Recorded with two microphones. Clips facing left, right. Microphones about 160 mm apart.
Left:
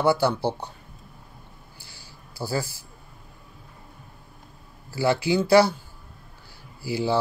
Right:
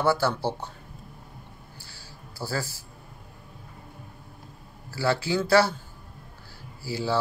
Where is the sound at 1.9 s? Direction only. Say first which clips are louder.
Right 2 dB; 15° left (ahead or behind).